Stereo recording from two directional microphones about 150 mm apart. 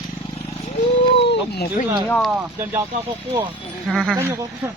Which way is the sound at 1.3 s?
90° left.